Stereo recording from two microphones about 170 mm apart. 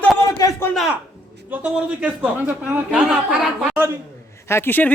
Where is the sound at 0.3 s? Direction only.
20° left (ahead or behind).